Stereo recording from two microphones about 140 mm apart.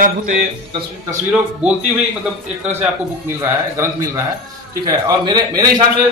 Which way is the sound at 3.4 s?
20° right (ahead or behind).